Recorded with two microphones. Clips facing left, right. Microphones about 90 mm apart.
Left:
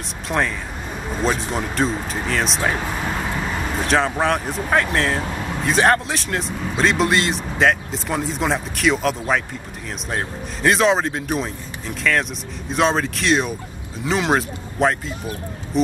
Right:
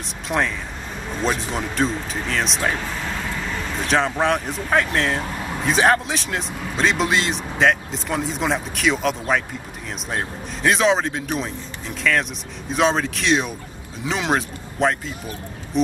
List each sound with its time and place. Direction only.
0.3 s speech: 10° right (ahead or behind)
1.2 s speech: centre (ahead or behind)
2.7 s a sound: 15° left (ahead or behind)
3.8 s speech: centre (ahead or behind)